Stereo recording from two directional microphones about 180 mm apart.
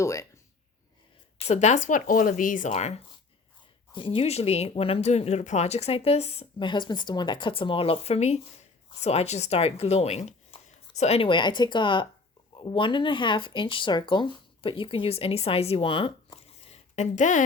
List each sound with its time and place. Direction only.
0.0 s speech: 15° left (ahead or behind)
1.5 s speech: 40° left (ahead or behind)